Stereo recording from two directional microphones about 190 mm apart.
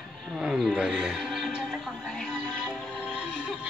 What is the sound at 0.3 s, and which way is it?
Music, 5° right (ahead or behind).